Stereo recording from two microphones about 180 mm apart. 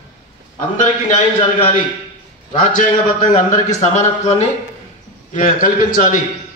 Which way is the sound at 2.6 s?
45° left (ahead or behind).